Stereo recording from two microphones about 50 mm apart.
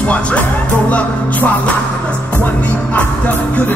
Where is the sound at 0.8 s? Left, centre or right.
Left.